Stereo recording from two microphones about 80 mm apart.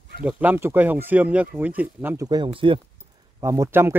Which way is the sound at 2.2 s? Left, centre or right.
Right.